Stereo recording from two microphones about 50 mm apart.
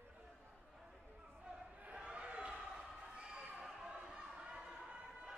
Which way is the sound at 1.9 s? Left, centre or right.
Right.